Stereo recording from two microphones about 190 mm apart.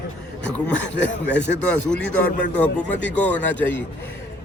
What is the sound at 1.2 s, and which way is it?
Speech, 65° left (ahead or behind).